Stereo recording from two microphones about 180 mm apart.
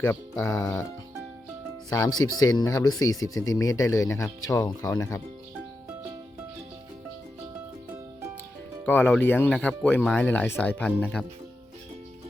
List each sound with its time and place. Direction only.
0.0 s speech: 15° left (ahead or behind)
1.9 s speech: 20° left (ahead or behind)
8.9 s speech: 10° left (ahead or behind)